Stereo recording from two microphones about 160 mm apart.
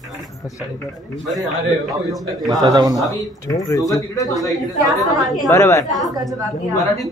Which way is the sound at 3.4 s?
20° left (ahead or behind).